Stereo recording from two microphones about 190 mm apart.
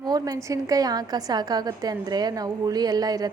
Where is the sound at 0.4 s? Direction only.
15° right (ahead or behind).